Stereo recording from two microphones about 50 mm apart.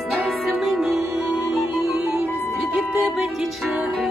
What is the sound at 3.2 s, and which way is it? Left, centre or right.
Music, centre.